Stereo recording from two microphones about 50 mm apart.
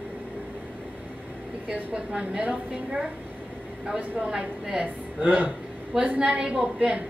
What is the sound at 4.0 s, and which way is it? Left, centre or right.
Speech, right.